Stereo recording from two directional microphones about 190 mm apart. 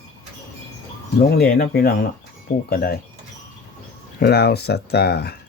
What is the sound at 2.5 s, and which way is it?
Speech, 40° left (ahead or behind).